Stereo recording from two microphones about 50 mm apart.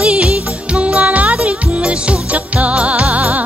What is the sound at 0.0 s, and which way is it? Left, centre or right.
Music, centre.